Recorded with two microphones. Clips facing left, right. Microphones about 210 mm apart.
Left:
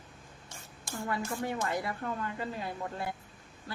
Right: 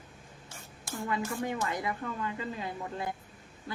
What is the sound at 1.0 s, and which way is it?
A woman's voice, 20° right (ahead or behind).